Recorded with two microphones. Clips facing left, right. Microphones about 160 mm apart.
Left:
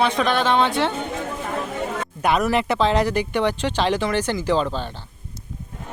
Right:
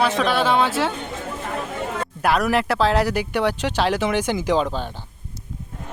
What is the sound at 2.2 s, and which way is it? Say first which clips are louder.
Speech: even; centre (ahead or behind).